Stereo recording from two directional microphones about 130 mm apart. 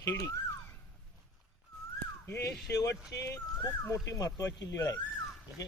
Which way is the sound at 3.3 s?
20° left (ahead or behind).